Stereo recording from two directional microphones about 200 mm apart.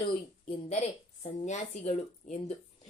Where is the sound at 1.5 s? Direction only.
35° left (ahead or behind).